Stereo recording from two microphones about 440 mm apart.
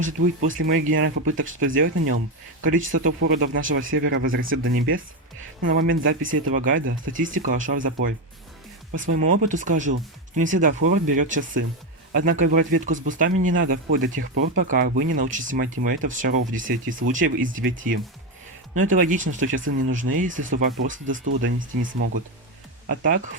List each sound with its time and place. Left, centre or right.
0.0 s speech: right
18.8 s speech: centre